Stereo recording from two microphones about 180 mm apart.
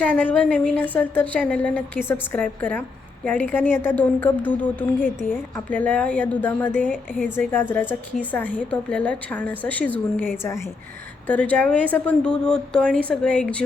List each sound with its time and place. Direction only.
0.0 s a woman's voice: 10° left (ahead or behind)